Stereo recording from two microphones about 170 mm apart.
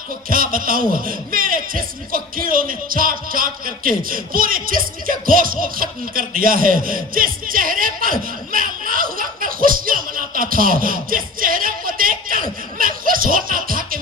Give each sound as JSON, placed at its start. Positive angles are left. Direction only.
{"t": 0.3, "sound": "speech", "side_deg": -55}